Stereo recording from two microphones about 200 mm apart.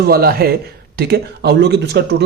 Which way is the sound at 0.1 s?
50° right (ahead or behind).